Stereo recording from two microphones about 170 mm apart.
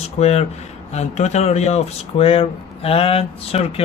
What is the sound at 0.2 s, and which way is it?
Speech, 40° left (ahead or behind).